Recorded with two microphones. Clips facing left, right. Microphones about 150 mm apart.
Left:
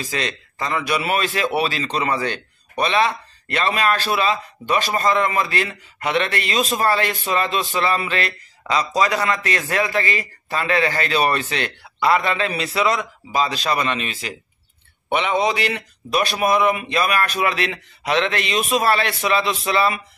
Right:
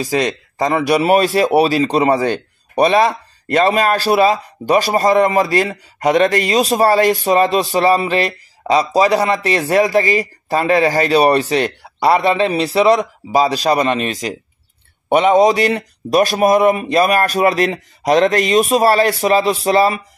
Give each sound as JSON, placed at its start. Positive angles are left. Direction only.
{"t": 0.7, "sound": "speech", "side_deg": -40}